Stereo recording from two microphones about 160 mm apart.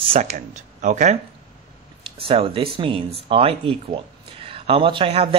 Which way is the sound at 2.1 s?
35° right (ahead or behind).